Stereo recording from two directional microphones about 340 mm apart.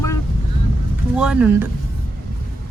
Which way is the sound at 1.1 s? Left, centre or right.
Centre.